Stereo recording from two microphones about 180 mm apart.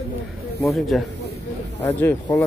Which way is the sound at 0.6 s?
Centre (ahead or behind).